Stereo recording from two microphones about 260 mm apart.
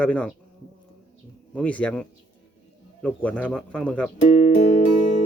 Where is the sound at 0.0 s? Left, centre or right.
Centre.